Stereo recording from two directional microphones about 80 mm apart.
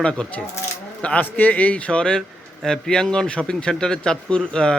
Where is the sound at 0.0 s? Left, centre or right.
Centre.